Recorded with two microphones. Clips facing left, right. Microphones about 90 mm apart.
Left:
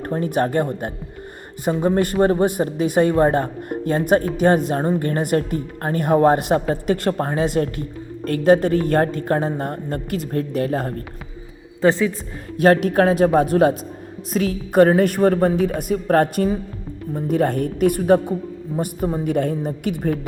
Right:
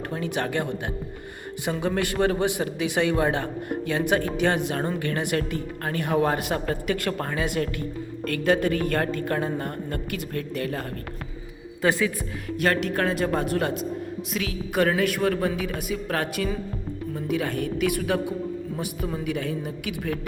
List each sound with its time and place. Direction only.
0.0 s a woman's voice: 40° left (ahead or behind)
4.7 s a woman's voice: 30° left (ahead or behind)
4.9 s a woman's voice: 45° left (ahead or behind)
11.8 s a woman's voice: 25° left (ahead or behind)
12.6 s speech: 45° left (ahead or behind)